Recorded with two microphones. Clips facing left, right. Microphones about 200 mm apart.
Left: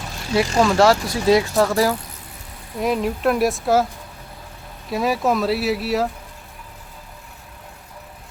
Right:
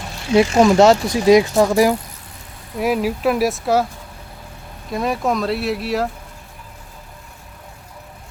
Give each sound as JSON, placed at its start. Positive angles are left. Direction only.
{"t": 0.3, "sound": "speech", "side_deg": -20}
{"t": 4.9, "sound": "speech", "side_deg": 5}